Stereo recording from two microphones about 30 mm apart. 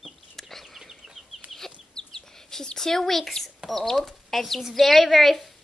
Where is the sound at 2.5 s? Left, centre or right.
Left.